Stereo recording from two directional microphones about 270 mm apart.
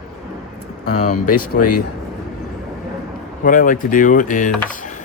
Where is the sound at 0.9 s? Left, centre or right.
Left.